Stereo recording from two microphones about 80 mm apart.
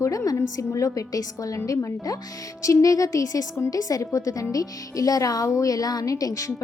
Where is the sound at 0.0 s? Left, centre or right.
Left.